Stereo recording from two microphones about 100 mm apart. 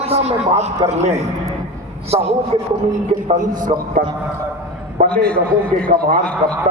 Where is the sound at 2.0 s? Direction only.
90° right.